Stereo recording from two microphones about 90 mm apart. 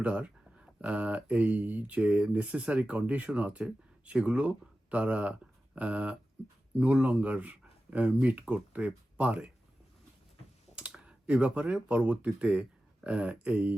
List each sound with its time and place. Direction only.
0.0 s speech: 15° right (ahead or behind)
10.8 s speech: 10° right (ahead or behind)